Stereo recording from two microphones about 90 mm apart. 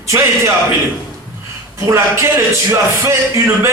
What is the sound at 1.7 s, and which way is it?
Speech, 30° right (ahead or behind).